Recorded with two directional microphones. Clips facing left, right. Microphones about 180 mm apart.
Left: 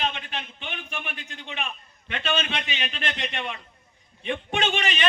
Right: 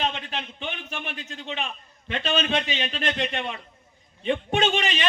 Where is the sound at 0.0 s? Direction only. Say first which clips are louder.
Right 2 dB; 35° right (ahead or behind).